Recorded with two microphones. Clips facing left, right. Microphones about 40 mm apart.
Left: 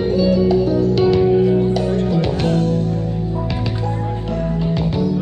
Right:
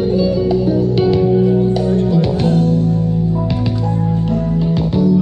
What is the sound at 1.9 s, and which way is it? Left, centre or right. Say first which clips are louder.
Music: right 3 dB; left.